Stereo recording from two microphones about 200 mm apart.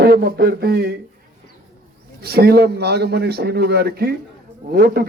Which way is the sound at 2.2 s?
50° right (ahead or behind).